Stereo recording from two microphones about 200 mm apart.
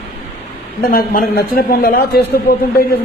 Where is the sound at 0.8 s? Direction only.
45° left (ahead or behind).